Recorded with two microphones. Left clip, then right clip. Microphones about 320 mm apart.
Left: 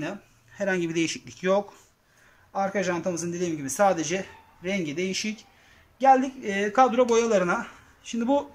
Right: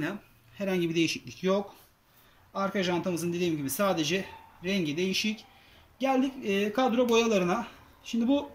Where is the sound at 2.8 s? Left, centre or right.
Centre.